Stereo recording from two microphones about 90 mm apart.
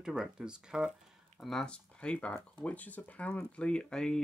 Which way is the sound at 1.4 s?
5° left (ahead or behind).